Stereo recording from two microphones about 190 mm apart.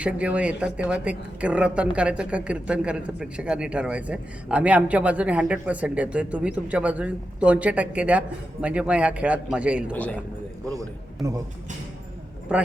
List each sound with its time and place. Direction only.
0.0 s a woman's voice: 5° right (ahead or behind)
9.9 s a man's voice: 5° left (ahead or behind)
10.8 s a man's voice: 15° right (ahead or behind)
12.5 s a man's voice: 5° right (ahead or behind)